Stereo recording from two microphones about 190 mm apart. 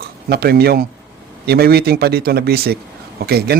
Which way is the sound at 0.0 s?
55° right (ahead or behind).